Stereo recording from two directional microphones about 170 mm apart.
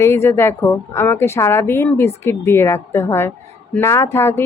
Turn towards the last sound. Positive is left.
turn(degrees=15)  # may be behind; listen again after turning